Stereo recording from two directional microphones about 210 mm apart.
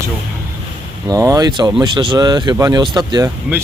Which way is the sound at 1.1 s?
15° right (ahead or behind).